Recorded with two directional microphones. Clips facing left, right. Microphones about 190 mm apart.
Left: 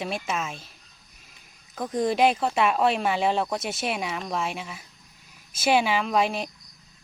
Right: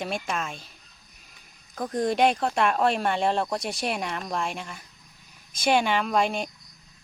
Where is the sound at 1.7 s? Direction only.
Centre (ahead or behind).